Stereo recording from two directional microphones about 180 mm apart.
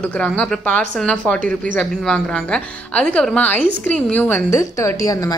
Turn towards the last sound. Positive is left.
turn(degrees=20)  # may be behind; listen again after turning